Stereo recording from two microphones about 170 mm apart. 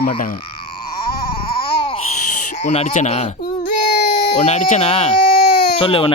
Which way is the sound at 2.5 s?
45° left (ahead or behind).